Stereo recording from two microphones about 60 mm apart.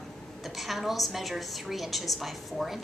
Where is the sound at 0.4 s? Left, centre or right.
Centre.